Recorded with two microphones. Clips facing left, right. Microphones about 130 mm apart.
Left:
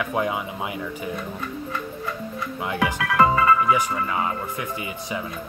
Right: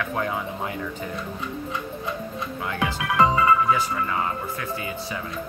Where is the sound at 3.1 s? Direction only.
20° right (ahead or behind).